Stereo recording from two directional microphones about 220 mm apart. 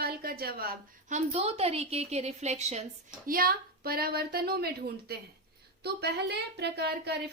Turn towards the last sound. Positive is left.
turn(degrees=-50)  # may be behind; listen again after turning